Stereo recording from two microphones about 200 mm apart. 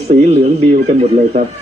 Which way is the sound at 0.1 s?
35° right (ahead or behind).